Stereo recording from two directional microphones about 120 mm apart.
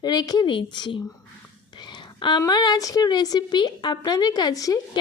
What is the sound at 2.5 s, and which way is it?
A woman's voice, 35° left (ahead or behind).